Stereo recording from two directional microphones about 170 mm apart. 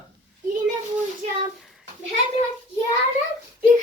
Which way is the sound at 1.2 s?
40° right (ahead or behind).